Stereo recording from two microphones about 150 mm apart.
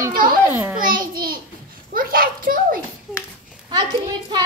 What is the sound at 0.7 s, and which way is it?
Speech, 70° right (ahead or behind).